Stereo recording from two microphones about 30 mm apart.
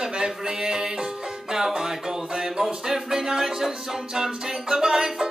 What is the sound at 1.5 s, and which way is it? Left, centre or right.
Music, centre.